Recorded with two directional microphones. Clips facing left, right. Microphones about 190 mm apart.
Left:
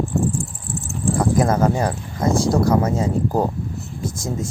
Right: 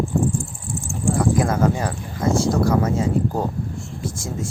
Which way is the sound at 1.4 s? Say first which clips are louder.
Left 2 dB; 40° left (ahead or behind).